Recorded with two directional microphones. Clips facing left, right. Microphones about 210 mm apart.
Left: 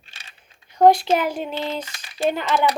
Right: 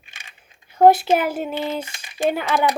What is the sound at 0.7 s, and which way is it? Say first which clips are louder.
Speech: right 1 dB; 5° right (ahead or behind).